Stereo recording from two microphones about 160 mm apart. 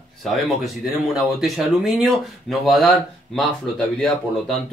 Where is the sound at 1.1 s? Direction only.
Centre (ahead or behind).